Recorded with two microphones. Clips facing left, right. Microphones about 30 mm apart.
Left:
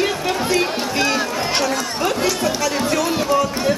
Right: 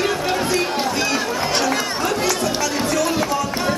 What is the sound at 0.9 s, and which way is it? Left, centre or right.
Chatter, centre.